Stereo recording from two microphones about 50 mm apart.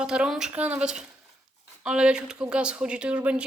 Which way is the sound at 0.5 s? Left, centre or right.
Right.